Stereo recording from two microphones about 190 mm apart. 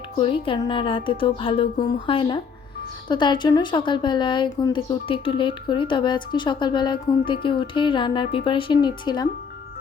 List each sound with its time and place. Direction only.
0.2 s speech: 25° left (ahead or behind)